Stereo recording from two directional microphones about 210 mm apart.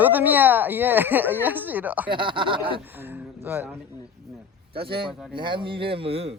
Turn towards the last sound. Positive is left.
turn(degrees=-30)  # may be behind; listen again after turning